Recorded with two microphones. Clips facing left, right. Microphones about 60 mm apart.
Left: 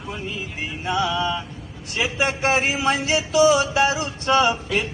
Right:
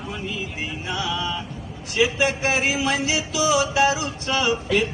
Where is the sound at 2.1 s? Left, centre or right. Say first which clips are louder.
Left 1 dB; left.